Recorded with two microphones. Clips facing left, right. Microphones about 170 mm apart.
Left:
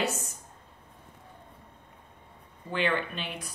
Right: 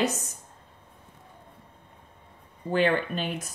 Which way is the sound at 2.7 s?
40° right (ahead or behind).